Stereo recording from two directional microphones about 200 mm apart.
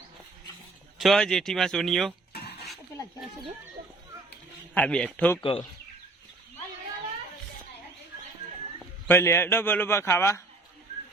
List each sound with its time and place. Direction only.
0.9 s speech: centre (ahead or behind)
2.3 s a sound: 50° left (ahead or behind)
4.7 s a man's voice: 5° left (ahead or behind)
5.4 s speech: 25° left (ahead or behind)
9.0 s a man's voice: 15° left (ahead or behind)